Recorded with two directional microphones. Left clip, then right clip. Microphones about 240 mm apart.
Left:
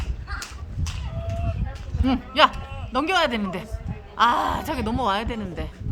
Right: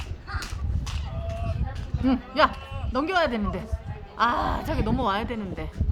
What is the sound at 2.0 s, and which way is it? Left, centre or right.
A woman's voice, centre.